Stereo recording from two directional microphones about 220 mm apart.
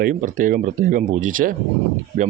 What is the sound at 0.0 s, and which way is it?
Speech, 35° right (ahead or behind).